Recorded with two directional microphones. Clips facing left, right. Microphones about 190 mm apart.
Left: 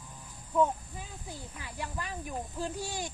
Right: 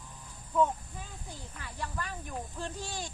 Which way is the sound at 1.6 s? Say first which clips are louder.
Right 1 dB; 10° left (ahead or behind).